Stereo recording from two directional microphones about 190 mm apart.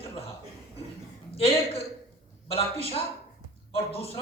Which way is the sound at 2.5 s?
30° left (ahead or behind).